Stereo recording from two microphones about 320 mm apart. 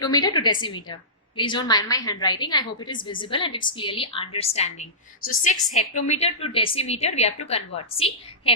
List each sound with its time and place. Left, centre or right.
0.0 s a woman's voice: centre